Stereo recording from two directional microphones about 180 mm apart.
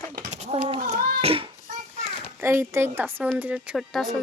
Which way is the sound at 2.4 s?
15° right (ahead or behind).